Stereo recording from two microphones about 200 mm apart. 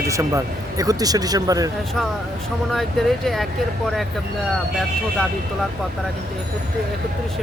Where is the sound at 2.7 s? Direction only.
Centre (ahead or behind).